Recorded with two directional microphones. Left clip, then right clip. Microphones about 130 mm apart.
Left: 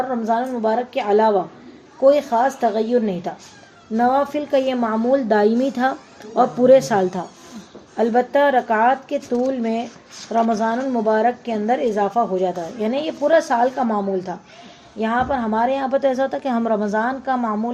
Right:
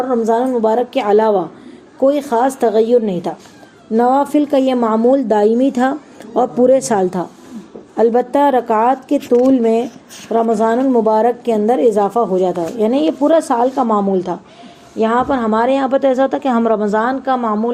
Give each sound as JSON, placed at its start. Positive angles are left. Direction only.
{"t": 0.3, "sound": "a woman's voice", "side_deg": -50}
{"t": 7.9, "sound": "a woman's voice", "side_deg": -45}